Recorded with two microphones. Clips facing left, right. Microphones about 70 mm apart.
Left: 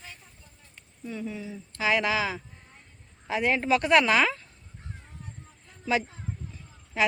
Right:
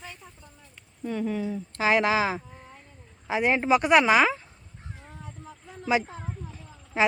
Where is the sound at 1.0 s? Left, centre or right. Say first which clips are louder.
Right 7 dB; right.